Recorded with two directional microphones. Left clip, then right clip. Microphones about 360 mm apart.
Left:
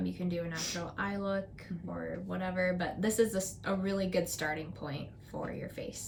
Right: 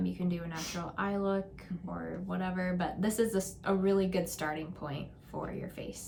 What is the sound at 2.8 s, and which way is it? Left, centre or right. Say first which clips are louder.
Speech: even; right.